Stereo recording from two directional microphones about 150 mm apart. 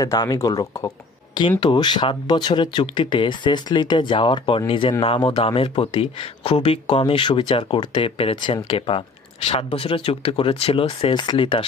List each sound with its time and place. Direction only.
0.0 s speech: 25° left (ahead or behind)